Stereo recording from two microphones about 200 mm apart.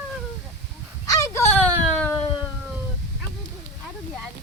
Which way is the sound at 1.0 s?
15° left (ahead or behind).